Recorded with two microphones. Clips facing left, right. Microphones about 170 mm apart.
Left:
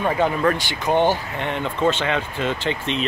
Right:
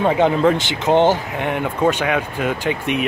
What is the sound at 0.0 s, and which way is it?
Speech, 20° right (ahead or behind).